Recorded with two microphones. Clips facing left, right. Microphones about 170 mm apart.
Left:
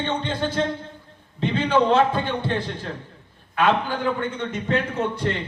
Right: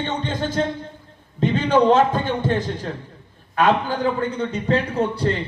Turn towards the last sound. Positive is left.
turn(degrees=-35)  # may be behind; listen again after turning